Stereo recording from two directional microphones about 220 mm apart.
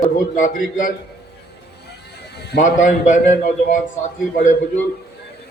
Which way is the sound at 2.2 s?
50° left (ahead or behind).